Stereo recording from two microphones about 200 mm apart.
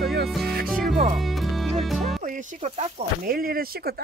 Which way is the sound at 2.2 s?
40° right (ahead or behind).